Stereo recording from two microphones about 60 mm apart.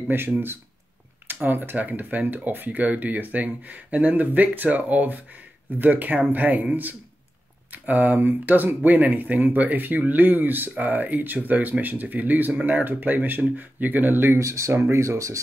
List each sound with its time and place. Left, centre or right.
1.2 s speech: right
14.4 s speech: right
14.7 s speech: right